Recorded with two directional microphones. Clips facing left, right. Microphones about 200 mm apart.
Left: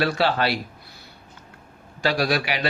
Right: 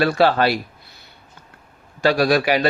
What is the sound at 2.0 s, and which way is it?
Speech, 50° right (ahead or behind).